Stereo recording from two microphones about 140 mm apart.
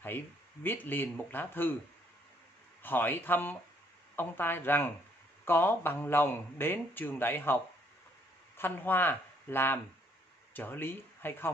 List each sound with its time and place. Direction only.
0.7 s speech: 15° left (ahead or behind)
2.8 s speech: 15° left (ahead or behind)